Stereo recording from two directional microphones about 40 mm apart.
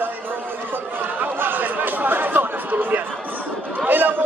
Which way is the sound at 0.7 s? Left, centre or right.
Right.